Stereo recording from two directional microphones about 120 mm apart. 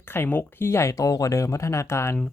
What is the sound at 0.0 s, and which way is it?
Speech, 20° left (ahead or behind).